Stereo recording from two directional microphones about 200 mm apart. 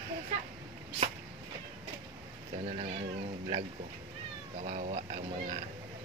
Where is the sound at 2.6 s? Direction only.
30° right (ahead or behind).